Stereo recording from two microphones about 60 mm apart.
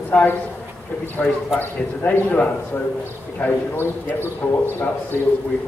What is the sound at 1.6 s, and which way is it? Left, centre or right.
A man's voice, left.